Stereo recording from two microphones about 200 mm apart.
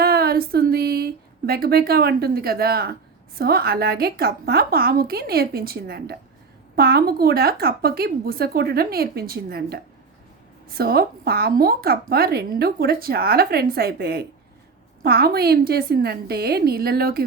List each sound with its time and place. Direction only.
0.0 s a woman's voice: 50° right (ahead or behind)